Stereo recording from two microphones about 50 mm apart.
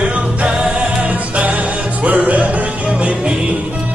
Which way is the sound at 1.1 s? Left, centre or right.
Right.